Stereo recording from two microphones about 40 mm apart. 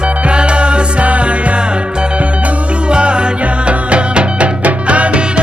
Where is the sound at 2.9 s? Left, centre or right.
Right.